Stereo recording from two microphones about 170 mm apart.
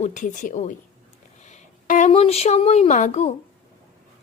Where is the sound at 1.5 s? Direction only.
45° left (ahead or behind).